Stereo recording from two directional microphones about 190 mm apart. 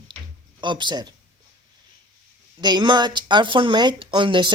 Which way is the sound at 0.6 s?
25° right (ahead or behind).